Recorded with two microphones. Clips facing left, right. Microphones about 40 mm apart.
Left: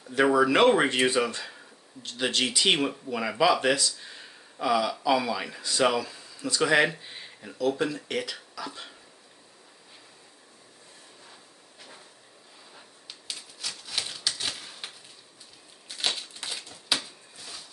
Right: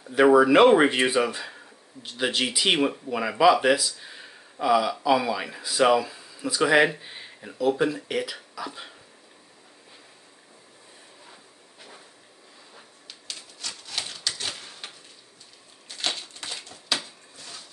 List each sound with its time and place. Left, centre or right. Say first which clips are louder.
0.0 s speech: right 5 dB; centre
13.3 s typewriter: even; centre
16.2 s a sound: even; centre